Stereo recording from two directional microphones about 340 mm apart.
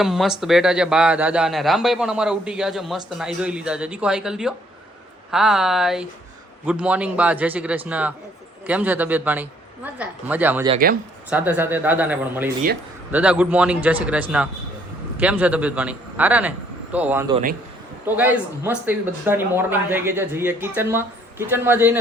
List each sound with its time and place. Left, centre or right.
0.0 s a man's voice: centre
10.7 s speech: right
11.3 s a man's voice: centre